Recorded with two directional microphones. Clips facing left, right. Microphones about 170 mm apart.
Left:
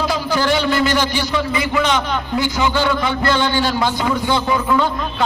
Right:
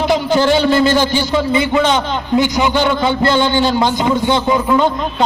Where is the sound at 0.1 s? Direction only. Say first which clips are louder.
Right 5 dB; 25° right (ahead or behind).